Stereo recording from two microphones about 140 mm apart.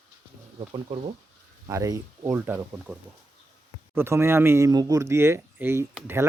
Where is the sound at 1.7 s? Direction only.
25° right (ahead or behind).